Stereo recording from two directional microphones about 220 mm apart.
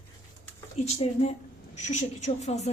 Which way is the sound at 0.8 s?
30° left (ahead or behind).